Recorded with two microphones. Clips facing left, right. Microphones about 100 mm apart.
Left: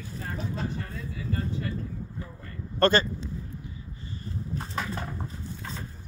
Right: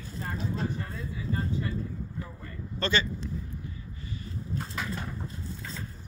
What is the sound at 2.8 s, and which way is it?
Speech, 45° left (ahead or behind).